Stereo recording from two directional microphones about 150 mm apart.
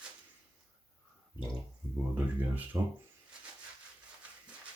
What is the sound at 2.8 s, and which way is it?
Speech, 20° right (ahead or behind).